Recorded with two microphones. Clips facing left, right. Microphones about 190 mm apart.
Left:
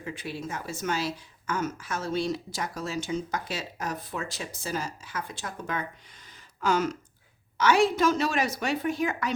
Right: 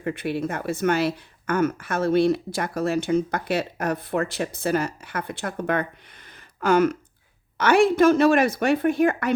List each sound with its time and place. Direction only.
0.0 s speech: 60° right (ahead or behind)